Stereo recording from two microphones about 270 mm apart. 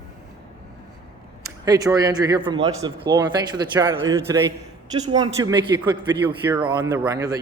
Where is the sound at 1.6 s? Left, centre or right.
Centre.